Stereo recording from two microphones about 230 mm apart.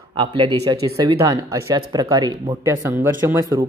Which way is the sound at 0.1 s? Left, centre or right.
Right.